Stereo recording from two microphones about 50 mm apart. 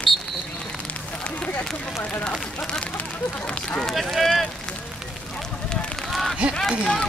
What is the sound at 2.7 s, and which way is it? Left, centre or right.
Speech, left.